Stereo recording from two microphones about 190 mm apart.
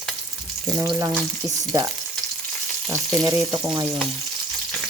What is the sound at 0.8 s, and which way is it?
Frying, 15° right (ahead or behind).